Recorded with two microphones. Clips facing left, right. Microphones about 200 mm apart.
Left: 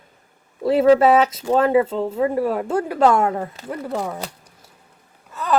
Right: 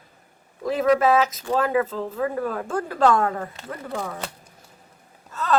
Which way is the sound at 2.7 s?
15° left (ahead or behind).